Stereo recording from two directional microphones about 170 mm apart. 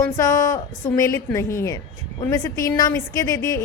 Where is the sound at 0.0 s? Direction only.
20° left (ahead or behind).